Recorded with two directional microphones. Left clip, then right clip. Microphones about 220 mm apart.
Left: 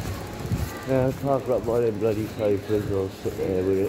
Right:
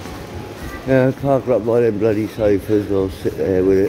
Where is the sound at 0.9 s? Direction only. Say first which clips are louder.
Right 8 dB; 35° right (ahead or behind).